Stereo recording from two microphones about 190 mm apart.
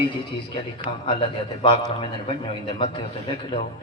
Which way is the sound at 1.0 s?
25° left (ahead or behind).